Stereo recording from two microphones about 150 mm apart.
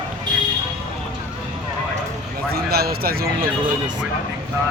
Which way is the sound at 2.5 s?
90° right.